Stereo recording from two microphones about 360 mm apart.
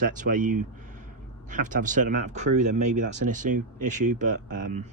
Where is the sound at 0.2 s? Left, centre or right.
Right.